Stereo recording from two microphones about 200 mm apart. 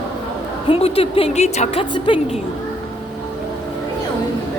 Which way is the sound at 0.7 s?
30° left (ahead or behind).